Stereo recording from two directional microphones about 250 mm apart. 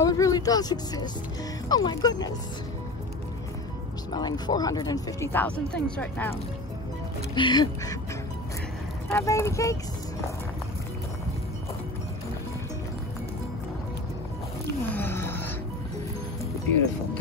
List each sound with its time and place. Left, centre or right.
0.0 s speech: centre
4.1 s speech: centre
7.3 s speech: centre
9.1 s speech: centre
15.0 s music: centre